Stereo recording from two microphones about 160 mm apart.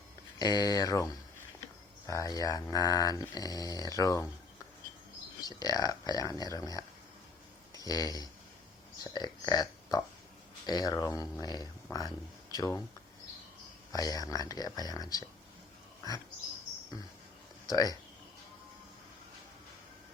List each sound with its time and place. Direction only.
0.3 s speech: 25° left (ahead or behind)
2.0 s speech: 20° left (ahead or behind)
5.5 s speech: 25° left (ahead or behind)
13.9 s speech: 25° left (ahead or behind)
17.7 s speech: 25° left (ahead or behind)